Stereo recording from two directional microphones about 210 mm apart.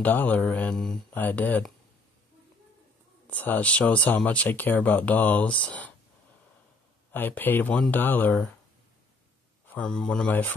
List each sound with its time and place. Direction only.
0.0 s speech: 10° left (ahead or behind)
3.3 s speech: 10° left (ahead or behind)
7.1 s speech: 10° left (ahead or behind)
9.7 s speech: 5° left (ahead or behind)